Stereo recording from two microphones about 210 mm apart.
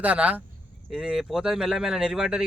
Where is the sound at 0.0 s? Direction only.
5° right (ahead or behind).